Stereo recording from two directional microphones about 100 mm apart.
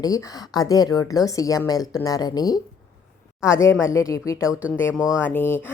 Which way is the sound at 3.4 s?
30° left (ahead or behind).